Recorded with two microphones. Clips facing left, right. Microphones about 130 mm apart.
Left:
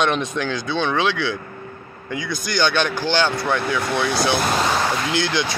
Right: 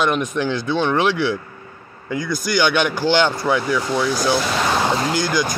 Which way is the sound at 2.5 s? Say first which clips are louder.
Right 2 dB; 15° right (ahead or behind).